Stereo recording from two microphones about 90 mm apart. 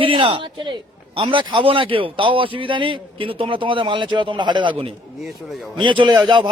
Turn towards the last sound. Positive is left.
turn(degrees=-60)  # may be behind; listen again after turning